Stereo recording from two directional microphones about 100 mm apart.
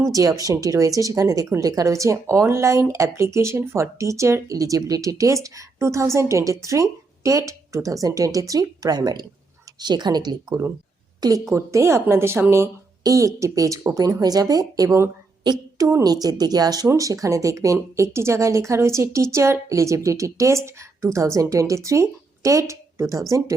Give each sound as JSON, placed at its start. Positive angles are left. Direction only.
{"t": 0.1, "sound": "a woman's voice", "side_deg": -35}